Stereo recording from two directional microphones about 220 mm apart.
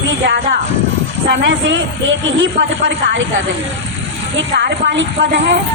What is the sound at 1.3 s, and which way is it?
Speech, 55° right (ahead or behind).